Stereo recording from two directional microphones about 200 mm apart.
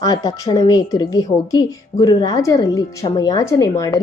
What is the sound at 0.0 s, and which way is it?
A woman's voice, 20° left (ahead or behind).